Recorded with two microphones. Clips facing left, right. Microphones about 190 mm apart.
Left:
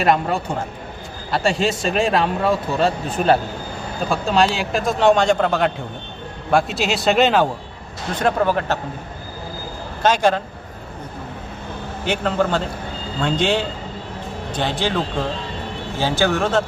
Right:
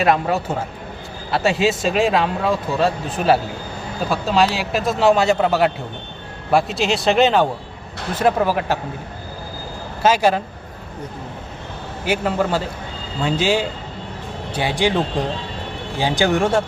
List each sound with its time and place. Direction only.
0.0 s speech: 5° right (ahead or behind)
10.0 s speech: 5° right (ahead or behind)
12.0 s speech: 5° right (ahead or behind)